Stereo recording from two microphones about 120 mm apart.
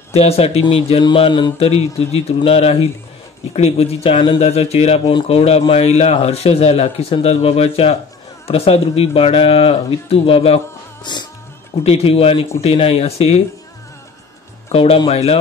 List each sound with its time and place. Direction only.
0.1 s speech: 60° left (ahead or behind)
1.0 s mantra: 45° left (ahead or behind)
1.6 s speech: 55° left (ahead or behind)
4.4 s speech: 60° left (ahead or behind)
11.1 s mantra: 40° left (ahead or behind)
11.8 s speech: 55° left (ahead or behind)
14.7 s speech: 55° left (ahead or behind)